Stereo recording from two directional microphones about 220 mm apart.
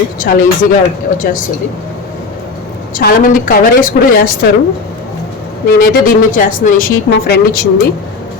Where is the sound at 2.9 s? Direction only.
40° left (ahead or behind).